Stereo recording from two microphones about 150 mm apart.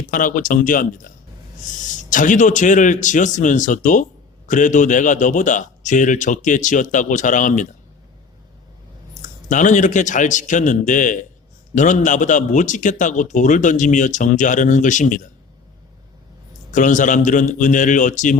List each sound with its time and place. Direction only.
0.1 s a man's voice: 65° left (ahead or behind)
9.5 s a man's voice: 55° left (ahead or behind)
16.7 s a man's voice: 60° left (ahead or behind)